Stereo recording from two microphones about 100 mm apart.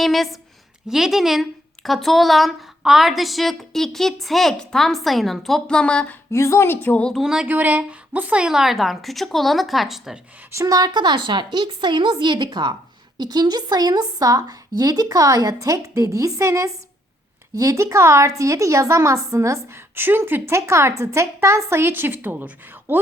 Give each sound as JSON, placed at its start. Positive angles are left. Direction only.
{"t": 0.0, "sound": "a woman's voice", "side_deg": 0}
{"t": 6.3, "sound": "a woman's voice", "side_deg": 30}
{"t": 7.1, "sound": "a woman's voice", "side_deg": -5}
{"t": 7.4, "sound": "a woman's voice", "side_deg": -15}
{"t": 10.5, "sound": "a woman's voice", "side_deg": -30}